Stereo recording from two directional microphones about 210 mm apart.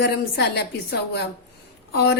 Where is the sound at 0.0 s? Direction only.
50° left (ahead or behind).